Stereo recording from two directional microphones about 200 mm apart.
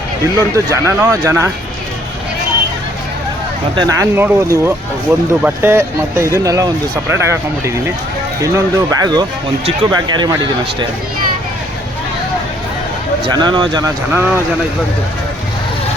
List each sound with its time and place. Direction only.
0.3 s speech: 15° right (ahead or behind)
3.8 s speech: 15° right (ahead or behind)
13.3 s speech: 20° right (ahead or behind)